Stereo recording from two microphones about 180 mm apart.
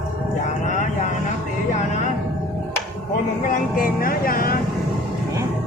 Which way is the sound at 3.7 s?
50° left (ahead or behind).